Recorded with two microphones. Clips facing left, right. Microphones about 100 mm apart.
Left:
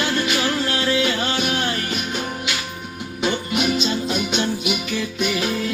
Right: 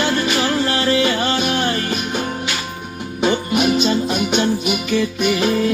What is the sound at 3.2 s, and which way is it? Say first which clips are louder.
Music: right 5 dB; 20° right (ahead or behind).